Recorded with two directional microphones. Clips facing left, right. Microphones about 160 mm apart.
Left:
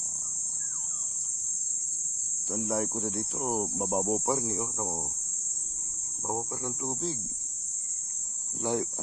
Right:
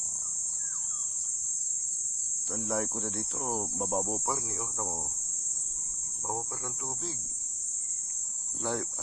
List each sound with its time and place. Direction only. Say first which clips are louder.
2.6 s speech: left 2 dB; 5° left (ahead or behind)
3.3 s speech: left 3 dB; 20° left (ahead or behind)
6.8 s speech: left 7 dB; 30° left (ahead or behind)
8.6 s speech: left 4 dB; 15° left (ahead or behind)